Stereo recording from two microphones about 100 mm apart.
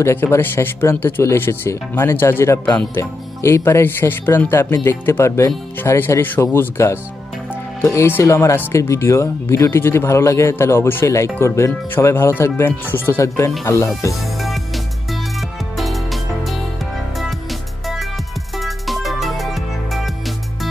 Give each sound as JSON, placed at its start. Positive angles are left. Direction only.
{"t": 0.0, "sound": "speech", "side_deg": 25}
{"t": 15.7, "sound": "music", "side_deg": 0}